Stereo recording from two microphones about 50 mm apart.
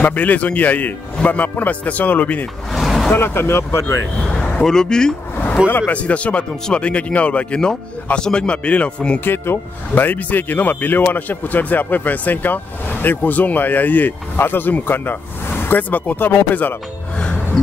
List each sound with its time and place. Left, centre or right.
0.0 s speech: left
2.7 s vehicle: centre
3.2 s speech: left
4.3 s a sound: left
4.6 s speech: centre
5.7 s speech: left
5.9 s speech: left
9.2 s speech: left